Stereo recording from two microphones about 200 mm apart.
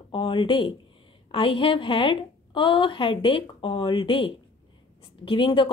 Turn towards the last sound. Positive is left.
turn(degrees=25)  # may be behind; listen again after turning